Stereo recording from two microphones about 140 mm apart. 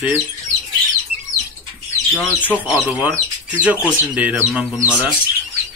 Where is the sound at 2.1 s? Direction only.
10° left (ahead or behind).